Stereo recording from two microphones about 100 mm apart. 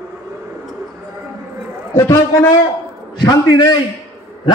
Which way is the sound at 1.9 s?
25° left (ahead or behind).